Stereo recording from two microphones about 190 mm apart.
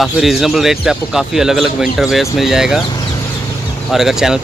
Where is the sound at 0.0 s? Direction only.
Centre (ahead or behind).